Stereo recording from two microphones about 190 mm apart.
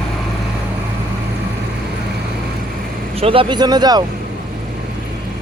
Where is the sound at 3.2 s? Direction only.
30° right (ahead or behind).